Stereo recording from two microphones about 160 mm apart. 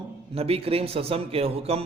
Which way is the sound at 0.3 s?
40° right (ahead or behind).